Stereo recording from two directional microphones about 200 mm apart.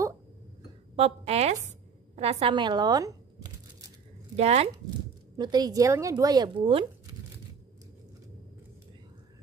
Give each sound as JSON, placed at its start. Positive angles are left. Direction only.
{"t": 0.9, "sound": "a woman's voice", "side_deg": -30}
{"t": 4.4, "sound": "a woman's voice", "side_deg": -30}
{"t": 5.4, "sound": "a woman's voice", "side_deg": -20}